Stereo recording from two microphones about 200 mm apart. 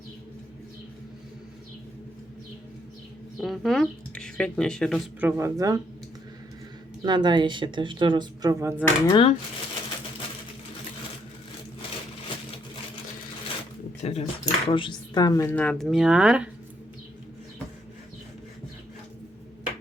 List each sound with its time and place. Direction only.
3.4 s speech: centre (ahead or behind)
5.2 s speech: 15° right (ahead or behind)
7.0 s a woman's voice: 20° right (ahead or behind)
8.8 s speech: 20° left (ahead or behind)
14.0 s speech: 35° left (ahead or behind); by 16.5 s 5° right (ahead or behind)